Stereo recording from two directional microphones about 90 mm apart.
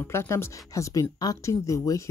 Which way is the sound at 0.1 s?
30° left (ahead or behind).